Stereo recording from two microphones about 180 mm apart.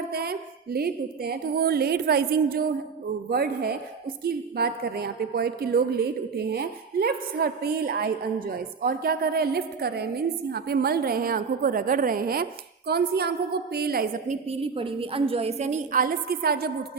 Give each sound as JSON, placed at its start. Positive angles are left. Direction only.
{"t": 0.1, "sound": "a woman's voice", "side_deg": -60}
{"t": 14.5, "sound": "a woman's voice", "side_deg": -30}